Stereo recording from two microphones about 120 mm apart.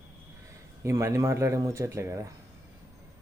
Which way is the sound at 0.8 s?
25° right (ahead or behind).